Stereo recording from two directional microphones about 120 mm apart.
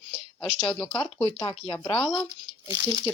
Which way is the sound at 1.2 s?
45° left (ahead or behind).